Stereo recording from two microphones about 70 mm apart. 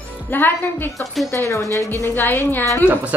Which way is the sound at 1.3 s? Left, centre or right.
Left.